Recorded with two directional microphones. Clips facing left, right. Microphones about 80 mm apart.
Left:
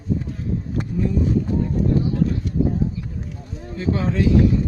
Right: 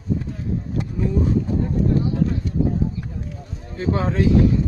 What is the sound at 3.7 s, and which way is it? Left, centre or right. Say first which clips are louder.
Speech: even; right.